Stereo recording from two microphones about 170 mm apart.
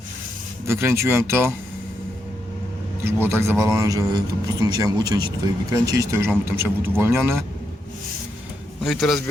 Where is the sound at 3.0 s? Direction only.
15° right (ahead or behind).